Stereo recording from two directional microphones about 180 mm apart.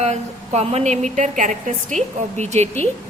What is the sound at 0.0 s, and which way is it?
Speech, 35° right (ahead or behind).